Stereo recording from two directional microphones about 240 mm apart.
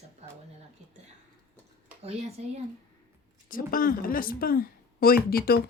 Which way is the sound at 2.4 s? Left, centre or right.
Right.